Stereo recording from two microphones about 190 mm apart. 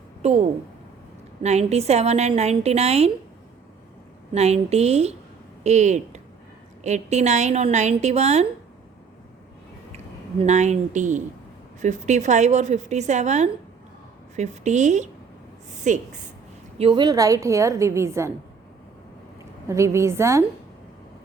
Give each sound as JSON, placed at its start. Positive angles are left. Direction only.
{"t": 0.2, "sound": "a woman's voice", "side_deg": -35}
{"t": 4.4, "sound": "a woman's voice", "side_deg": -35}
{"t": 10.4, "sound": "a woman's voice", "side_deg": -35}
{"t": 15.7, "sound": "a sound", "side_deg": -40}
{"t": 16.7, "sound": "a woman's voice", "side_deg": -30}
{"t": 19.6, "sound": "a woman's voice", "side_deg": -15}